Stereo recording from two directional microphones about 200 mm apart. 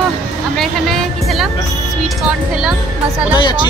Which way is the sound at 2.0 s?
5° right (ahead or behind).